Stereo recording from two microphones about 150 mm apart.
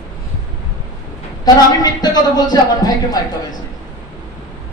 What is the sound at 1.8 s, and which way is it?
A woman's voice, 25° left (ahead or behind).